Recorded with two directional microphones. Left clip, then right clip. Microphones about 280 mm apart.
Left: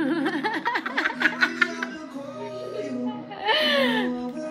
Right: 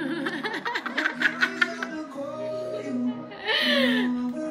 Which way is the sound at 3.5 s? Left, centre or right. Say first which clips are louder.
Left 2 dB; centre.